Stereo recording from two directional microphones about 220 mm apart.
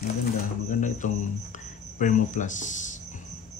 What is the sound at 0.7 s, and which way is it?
A man's voice, 35° left (ahead or behind).